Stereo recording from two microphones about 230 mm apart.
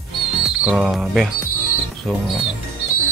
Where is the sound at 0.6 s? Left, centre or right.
Centre.